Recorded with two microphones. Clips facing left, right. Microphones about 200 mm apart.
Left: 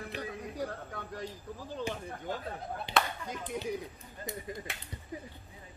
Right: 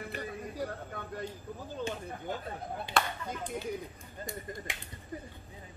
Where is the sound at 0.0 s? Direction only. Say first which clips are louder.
Even; centre (ahead or behind).